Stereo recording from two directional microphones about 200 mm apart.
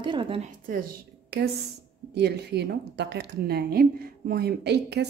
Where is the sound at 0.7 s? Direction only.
45° right (ahead or behind).